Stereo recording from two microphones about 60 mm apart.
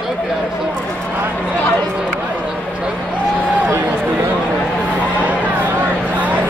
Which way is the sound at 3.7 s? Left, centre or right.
Right.